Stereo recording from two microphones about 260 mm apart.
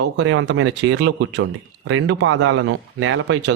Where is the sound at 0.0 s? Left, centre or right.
Right.